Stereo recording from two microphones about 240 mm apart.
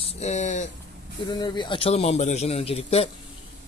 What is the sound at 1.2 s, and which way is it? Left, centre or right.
Speech, centre.